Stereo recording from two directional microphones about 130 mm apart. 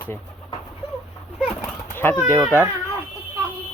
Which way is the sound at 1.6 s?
15° left (ahead or behind).